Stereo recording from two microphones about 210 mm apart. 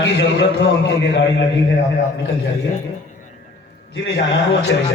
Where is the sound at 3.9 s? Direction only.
55° left (ahead or behind).